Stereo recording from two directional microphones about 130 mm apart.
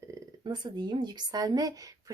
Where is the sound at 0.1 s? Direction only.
35° right (ahead or behind).